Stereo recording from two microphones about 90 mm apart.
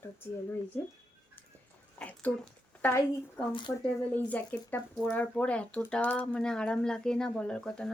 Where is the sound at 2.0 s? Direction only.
15° left (ahead or behind).